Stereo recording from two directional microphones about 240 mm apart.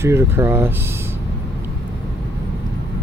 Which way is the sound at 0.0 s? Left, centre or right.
Centre.